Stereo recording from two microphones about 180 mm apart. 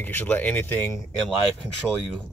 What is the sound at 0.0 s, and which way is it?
Speech, 10° left (ahead or behind).